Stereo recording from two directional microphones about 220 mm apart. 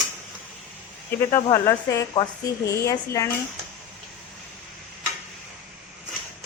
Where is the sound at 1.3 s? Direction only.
15° left (ahead or behind).